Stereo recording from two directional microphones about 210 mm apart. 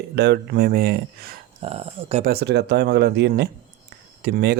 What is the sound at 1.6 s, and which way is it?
Speech, 30° right (ahead or behind).